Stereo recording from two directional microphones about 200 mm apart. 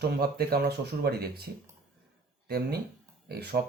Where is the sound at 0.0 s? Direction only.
50° right (ahead or behind).